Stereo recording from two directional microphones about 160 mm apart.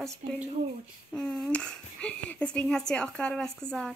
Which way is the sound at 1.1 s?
5° left (ahead or behind).